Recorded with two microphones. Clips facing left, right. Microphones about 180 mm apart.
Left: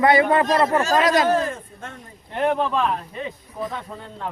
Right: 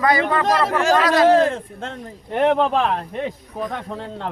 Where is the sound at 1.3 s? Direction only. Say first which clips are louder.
Right 6 dB; 85° right.